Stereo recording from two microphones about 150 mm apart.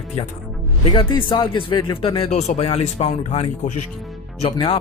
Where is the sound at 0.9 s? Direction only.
35° left (ahead or behind).